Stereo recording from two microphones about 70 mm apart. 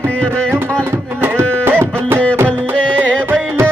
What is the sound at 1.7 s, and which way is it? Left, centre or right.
Music, right.